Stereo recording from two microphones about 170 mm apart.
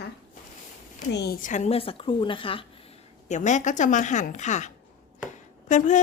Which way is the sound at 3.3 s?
45° left (ahead or behind).